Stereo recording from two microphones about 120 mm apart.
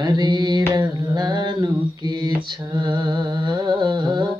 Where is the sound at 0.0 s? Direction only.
35° right (ahead or behind).